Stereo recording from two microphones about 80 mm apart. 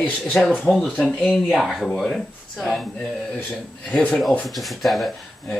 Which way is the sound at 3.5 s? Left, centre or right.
Centre.